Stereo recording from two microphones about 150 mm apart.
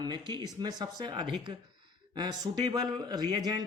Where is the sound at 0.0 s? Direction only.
30° right (ahead or behind).